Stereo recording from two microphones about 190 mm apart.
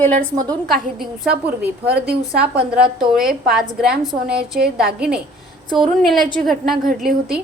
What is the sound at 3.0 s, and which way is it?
A woman's voice, centre (ahead or behind).